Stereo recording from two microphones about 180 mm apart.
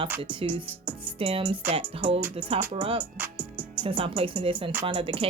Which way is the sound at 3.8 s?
30° right (ahead or behind).